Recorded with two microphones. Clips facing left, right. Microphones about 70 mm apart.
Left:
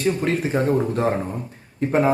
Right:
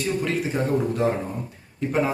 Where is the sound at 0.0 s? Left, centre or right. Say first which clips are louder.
Left 3 dB; left.